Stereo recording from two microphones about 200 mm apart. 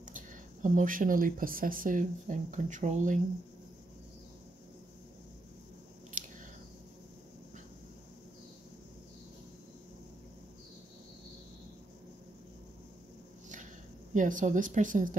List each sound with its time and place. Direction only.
0.0 s speech: 40° right (ahead or behind)
6.2 s biting: 40° right (ahead or behind)
14.1 s speech: 40° right (ahead or behind)